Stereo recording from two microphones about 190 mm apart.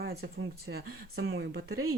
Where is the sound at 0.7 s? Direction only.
70° right (ahead or behind).